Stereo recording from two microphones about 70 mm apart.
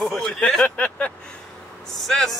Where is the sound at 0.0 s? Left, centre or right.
Centre.